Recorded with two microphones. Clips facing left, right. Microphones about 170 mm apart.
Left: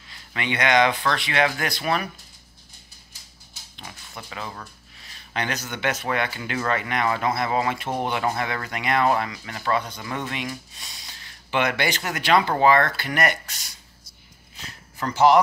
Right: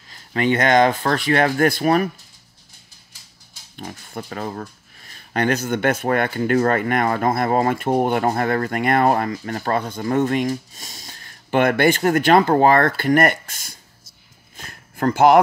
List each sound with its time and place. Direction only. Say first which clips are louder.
0.1 s speech: right 9 dB; 40° right (ahead or behind)
3.7 s speech: right 9 dB; 50° right (ahead or behind)
14.6 s a sound: right 9 dB; 50° right (ahead or behind)